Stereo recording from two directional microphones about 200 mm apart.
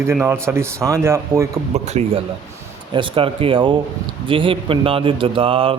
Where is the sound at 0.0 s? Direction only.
10° right (ahead or behind).